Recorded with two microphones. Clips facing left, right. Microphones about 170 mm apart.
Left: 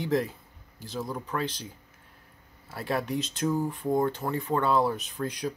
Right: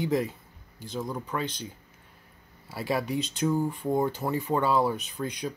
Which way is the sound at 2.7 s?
5° right (ahead or behind).